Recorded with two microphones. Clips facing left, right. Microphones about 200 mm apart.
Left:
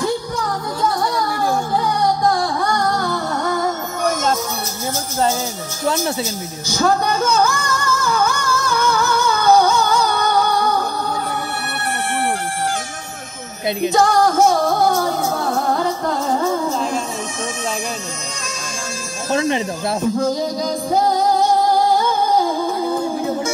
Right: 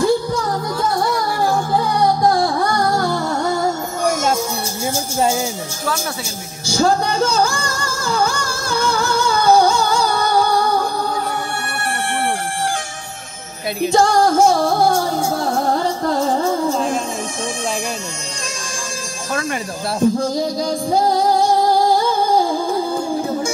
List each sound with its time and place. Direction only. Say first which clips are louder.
2.3 s music: right 2 dB; 30° right (ahead or behind)
4.0 s music: right 1 dB; 10° right (ahead or behind)
6.7 s music: right 1 dB; 30° right (ahead or behind)
13.8 s music: right 1 dB; 30° right (ahead or behind)
19.3 s speech: left 5 dB; 20° left (ahead or behind)